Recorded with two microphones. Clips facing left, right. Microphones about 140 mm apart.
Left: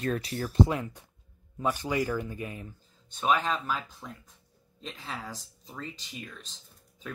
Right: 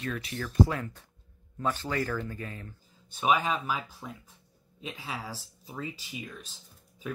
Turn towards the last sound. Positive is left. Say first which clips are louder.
# right 4 dB
turn(degrees=-10)  # may be behind; listen again after turning